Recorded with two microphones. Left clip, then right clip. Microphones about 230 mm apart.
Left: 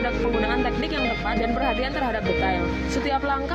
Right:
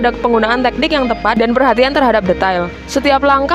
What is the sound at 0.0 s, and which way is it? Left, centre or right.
A woman's voice, right.